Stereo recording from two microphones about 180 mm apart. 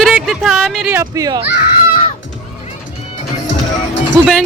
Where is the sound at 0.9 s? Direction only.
15° right (ahead or behind).